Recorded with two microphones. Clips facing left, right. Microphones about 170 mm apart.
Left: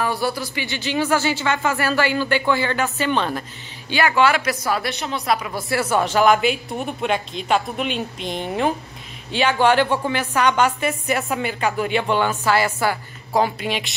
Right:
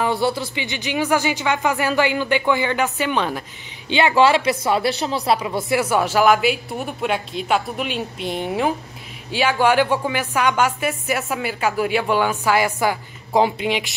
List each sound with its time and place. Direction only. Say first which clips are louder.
0.0 s a woman's voice: right 2 dB; 20° right (ahead or behind)
4.1 s a woman's voice: right 4 dB; 30° right (ahead or behind)
5.7 s a woman's voice: even; 15° right (ahead or behind)